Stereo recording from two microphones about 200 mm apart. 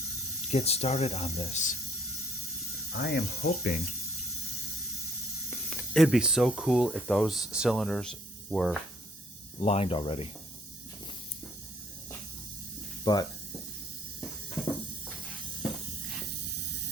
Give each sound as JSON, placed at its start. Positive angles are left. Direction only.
{"t": 0.5, "sound": "speech", "side_deg": 30}
{"t": 2.9, "sound": "speech", "side_deg": 50}
{"t": 5.5, "sound": "speech", "side_deg": 5}
{"t": 9.6, "sound": "speech", "side_deg": 30}
{"t": 13.1, "sound": "speech", "side_deg": 20}